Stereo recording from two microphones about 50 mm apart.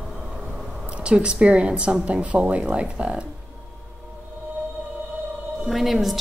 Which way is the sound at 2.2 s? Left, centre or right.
Right.